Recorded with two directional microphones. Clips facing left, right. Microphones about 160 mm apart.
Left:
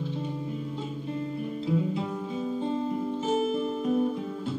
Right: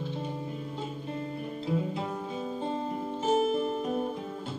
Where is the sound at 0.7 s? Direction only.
50° right (ahead or behind).